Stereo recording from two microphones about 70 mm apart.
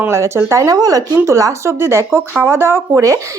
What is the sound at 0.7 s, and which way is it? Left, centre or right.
Speech, right.